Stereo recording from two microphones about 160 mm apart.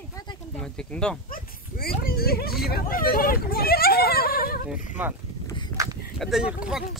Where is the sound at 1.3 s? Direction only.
65° left (ahead or behind).